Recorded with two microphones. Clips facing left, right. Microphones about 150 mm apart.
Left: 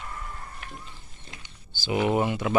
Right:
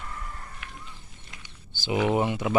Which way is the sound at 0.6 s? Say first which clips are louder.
Left 3 dB; 35° left (ahead or behind).